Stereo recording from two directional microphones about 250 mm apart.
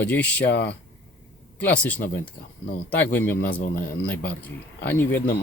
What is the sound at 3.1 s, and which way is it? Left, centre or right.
Speech, centre.